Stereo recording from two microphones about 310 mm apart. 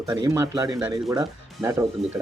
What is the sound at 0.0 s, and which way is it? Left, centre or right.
Speech, centre.